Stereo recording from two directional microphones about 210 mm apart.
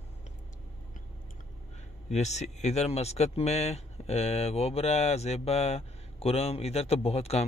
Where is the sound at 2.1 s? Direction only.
30° left (ahead or behind).